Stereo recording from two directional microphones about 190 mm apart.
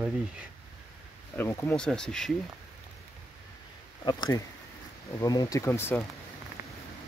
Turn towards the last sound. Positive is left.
turn(degrees=10)  # may be behind; listen again after turning